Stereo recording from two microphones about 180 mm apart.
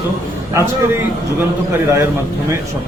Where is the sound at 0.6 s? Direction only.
15° right (ahead or behind).